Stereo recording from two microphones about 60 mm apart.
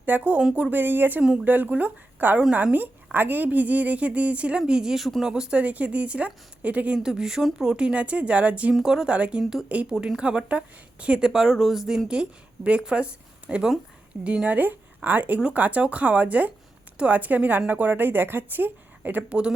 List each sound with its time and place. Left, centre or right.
0.0 s a woman's voice: right; by 5.3 s centre
5.3 s a woman's voice: centre
7.0 s a woman's voice: centre
8.7 s a woman's voice: centre
9.0 s a woman's voice: centre
9.4 s a woman's voice: centre
11.3 s a woman's voice: centre; by 19.2 s right
19.3 s a woman's voice: centre